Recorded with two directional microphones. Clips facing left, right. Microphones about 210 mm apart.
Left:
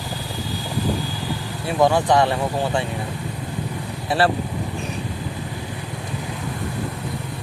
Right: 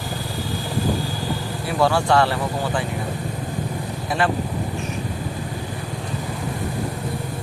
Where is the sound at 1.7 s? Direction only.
20° left (ahead or behind).